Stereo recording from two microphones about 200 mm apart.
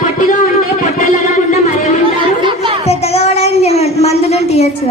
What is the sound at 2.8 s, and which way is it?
A woman's voice, 30° left (ahead or behind).